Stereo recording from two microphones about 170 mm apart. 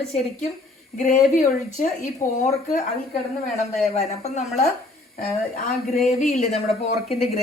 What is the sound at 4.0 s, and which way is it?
Speech, 40° left (ahead or behind).